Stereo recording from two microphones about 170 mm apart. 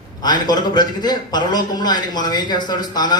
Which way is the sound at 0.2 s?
25° left (ahead or behind).